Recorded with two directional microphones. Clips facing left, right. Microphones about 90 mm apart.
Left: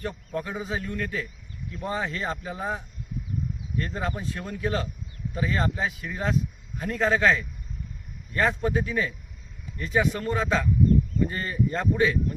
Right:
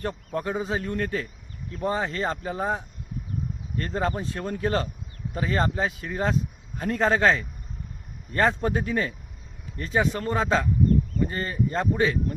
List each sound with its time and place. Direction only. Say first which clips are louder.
0.0 s a man's voice: right 2 dB; 40° right (ahead or behind)